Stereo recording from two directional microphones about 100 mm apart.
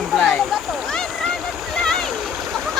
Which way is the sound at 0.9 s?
5° left (ahead or behind).